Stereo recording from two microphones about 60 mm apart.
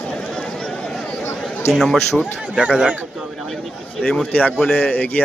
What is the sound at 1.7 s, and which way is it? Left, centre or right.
Speech, centre.